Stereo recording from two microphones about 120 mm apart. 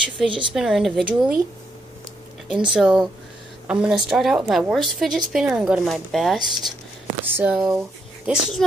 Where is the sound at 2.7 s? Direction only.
5° right (ahead or behind).